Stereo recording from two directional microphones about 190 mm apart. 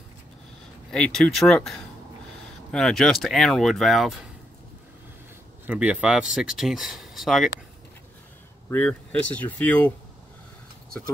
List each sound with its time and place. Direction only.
0.9 s speech: 5° left (ahead or behind)
5.7 s speech: 5° right (ahead or behind)
8.6 s speech: 10° left (ahead or behind)